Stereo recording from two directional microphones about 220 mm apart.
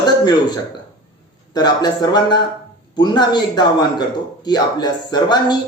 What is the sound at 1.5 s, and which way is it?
A man's voice, 20° left (ahead or behind).